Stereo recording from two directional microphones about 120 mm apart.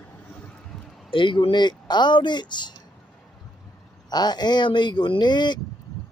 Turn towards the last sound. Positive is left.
turn(degrees=40)  # may be behind; listen again after turning